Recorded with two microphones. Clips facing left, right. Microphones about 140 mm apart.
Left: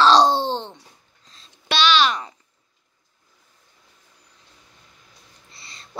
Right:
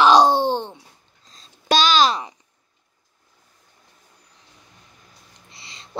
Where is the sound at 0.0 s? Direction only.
10° right (ahead or behind).